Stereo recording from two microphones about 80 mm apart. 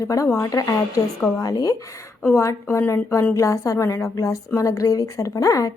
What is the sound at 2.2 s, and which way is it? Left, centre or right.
A woman's voice, left.